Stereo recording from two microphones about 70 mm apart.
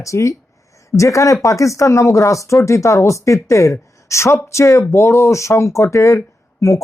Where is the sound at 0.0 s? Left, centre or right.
Left.